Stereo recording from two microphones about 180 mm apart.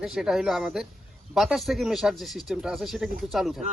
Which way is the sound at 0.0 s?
Centre (ahead or behind).